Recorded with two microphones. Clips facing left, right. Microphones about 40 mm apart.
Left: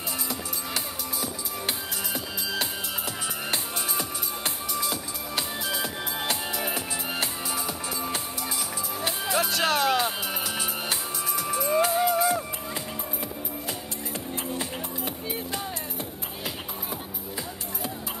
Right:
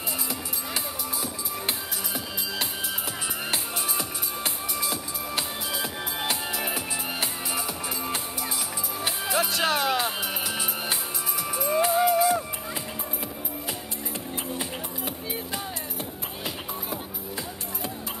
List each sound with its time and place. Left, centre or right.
3.5 s music: centre
6.6 s music: centre
9.2 s music: centre
11.3 s music: centre